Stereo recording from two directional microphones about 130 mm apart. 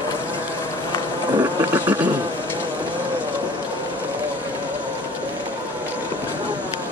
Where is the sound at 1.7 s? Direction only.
15° right (ahead or behind).